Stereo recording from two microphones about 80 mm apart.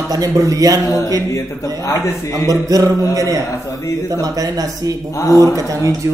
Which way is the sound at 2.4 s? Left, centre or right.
Right.